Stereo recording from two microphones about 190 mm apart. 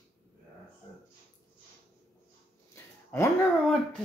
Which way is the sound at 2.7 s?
15° left (ahead or behind).